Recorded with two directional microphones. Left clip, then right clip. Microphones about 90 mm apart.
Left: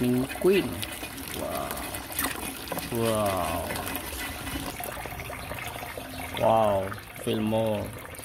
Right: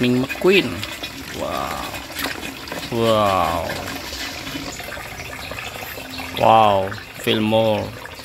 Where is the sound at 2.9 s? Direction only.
10° right (ahead or behind).